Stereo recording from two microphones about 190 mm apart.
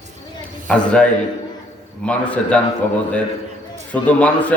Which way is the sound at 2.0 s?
5° left (ahead or behind).